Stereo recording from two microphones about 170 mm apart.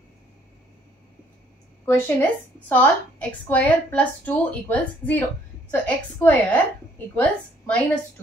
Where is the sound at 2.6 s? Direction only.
10° left (ahead or behind).